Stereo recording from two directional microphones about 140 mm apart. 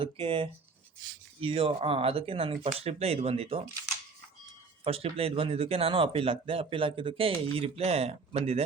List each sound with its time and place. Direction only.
0.0 s speech: 40° right (ahead or behind)
4.8 s speech: 45° right (ahead or behind)